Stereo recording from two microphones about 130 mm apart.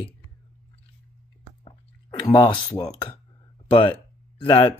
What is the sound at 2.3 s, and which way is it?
Speech, 35° left (ahead or behind).